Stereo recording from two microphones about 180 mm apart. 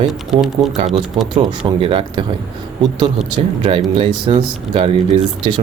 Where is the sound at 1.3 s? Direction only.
25° right (ahead or behind).